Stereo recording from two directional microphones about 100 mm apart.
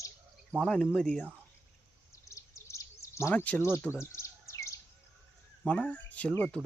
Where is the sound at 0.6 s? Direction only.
10° left (ahead or behind).